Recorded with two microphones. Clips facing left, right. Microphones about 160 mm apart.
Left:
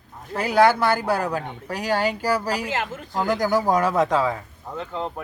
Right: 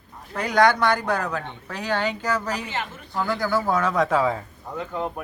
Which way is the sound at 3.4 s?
15° left (ahead or behind).